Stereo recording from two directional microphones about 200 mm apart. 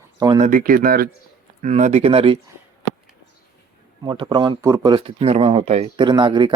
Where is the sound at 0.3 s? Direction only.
40° right (ahead or behind).